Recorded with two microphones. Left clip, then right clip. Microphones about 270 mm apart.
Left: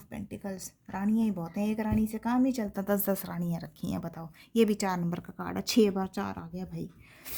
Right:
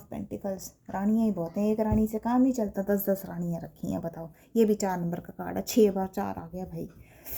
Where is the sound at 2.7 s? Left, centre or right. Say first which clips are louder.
Right 2 dB; left.